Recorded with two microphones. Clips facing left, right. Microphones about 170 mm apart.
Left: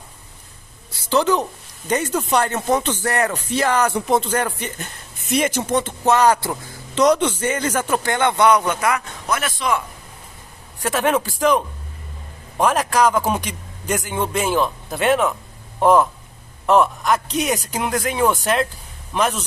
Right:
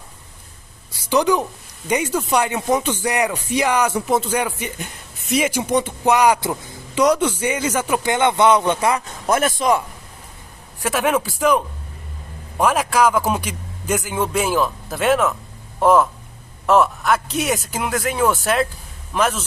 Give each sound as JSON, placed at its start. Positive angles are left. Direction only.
{"t": 1.0, "sound": "speech", "side_deg": -10}
{"t": 5.2, "sound": "a man's voice", "side_deg": 0}
{"t": 9.3, "sound": "speech", "side_deg": -45}
{"t": 10.8, "sound": "a man's voice", "side_deg": -10}